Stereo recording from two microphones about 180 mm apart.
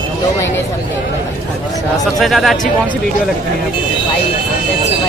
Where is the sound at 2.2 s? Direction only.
Centre (ahead or behind).